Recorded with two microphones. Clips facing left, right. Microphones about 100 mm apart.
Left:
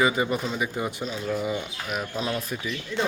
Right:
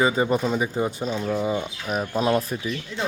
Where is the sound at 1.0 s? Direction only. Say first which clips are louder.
Right 5 dB; 45° right (ahead or behind).